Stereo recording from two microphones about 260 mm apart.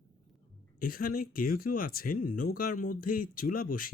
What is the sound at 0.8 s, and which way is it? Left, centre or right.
Speech, left.